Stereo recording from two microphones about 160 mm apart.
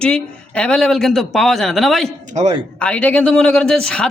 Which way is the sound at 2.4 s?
45° right (ahead or behind).